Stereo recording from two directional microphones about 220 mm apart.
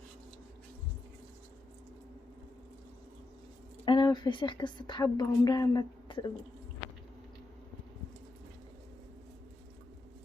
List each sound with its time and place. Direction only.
3.8 s a woman's voice: 20° left (ahead or behind)